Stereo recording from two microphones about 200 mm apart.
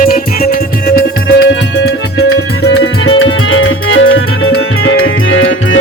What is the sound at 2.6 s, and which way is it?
Music, 70° left (ahead or behind).